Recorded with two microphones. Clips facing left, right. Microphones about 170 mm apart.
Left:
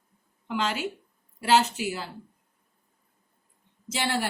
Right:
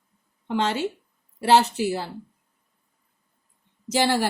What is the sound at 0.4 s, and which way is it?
A woman's voice, 30° right (ahead or behind).